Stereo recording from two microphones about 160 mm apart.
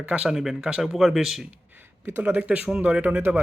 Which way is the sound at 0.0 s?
5° right (ahead or behind).